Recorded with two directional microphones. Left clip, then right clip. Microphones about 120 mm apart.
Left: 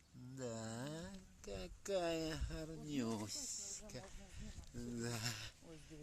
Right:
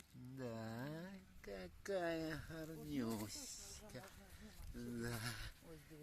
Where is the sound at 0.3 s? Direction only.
5° left (ahead or behind).